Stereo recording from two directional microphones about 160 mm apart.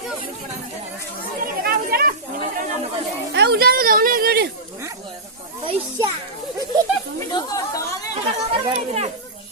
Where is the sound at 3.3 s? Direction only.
85° right.